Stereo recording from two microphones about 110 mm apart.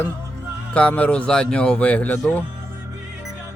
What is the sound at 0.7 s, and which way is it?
Speech, 10° left (ahead or behind).